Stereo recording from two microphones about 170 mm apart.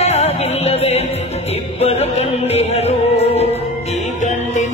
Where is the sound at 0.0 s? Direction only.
40° left (ahead or behind).